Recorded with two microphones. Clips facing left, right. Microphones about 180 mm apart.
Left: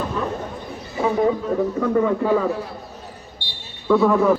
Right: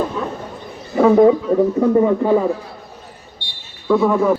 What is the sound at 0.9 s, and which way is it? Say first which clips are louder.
Speech: right 9 dB; 50° right (ahead or behind).